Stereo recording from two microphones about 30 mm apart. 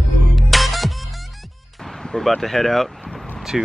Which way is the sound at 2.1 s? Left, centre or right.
Centre.